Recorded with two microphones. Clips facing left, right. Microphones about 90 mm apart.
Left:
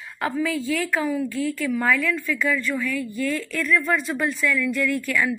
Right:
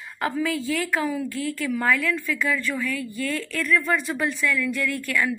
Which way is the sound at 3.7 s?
Centre (ahead or behind).